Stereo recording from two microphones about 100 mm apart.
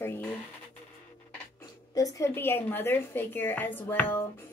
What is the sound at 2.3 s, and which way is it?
A woman's voice, 20° left (ahead or behind).